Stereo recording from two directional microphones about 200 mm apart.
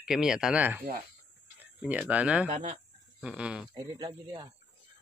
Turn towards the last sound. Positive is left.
turn(degrees=-25)  # may be behind; listen again after turning